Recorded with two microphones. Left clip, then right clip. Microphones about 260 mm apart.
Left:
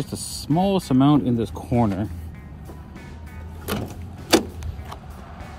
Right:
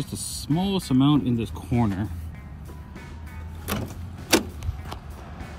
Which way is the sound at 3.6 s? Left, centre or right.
Centre.